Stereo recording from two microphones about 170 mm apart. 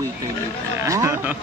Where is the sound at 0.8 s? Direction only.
15° right (ahead or behind).